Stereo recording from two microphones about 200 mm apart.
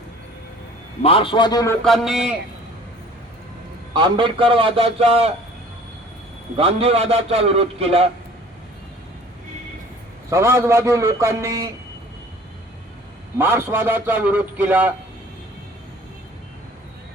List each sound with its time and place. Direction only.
1.0 s speech: 25° left (ahead or behind)
1.8 s a man's voice: centre (ahead or behind)
3.9 s a man's voice: 25° right (ahead or behind)
6.6 s a man's voice: 30° right (ahead or behind)
10.2 s a man's voice: 15° right (ahead or behind)
13.4 s a man's voice: 10° right (ahead or behind)